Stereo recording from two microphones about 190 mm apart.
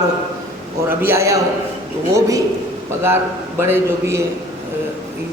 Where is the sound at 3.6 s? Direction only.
15° right (ahead or behind).